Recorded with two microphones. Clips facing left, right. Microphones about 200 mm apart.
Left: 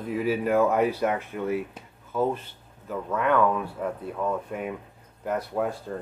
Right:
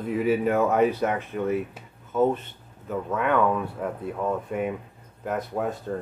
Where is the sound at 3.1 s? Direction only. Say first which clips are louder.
Even; 5° right (ahead or behind).